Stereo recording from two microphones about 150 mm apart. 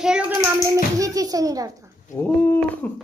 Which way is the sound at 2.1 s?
15° left (ahead or behind).